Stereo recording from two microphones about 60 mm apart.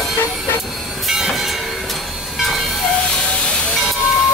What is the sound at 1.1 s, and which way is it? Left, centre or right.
Train, centre.